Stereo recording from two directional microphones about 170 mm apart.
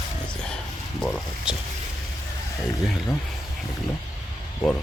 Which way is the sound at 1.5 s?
5° right (ahead or behind).